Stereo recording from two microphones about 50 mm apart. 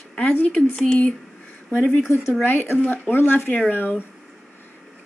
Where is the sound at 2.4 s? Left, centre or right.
Left.